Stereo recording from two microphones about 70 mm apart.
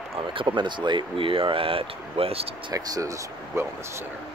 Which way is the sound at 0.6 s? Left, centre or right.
Right.